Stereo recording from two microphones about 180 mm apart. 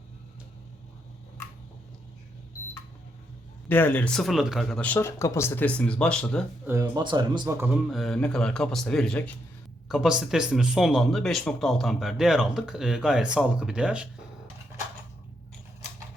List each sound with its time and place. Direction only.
3.7 s speech: 10° left (ahead or behind)
6.7 s speech: 15° right (ahead or behind)
7.6 s speech: 5° right (ahead or behind)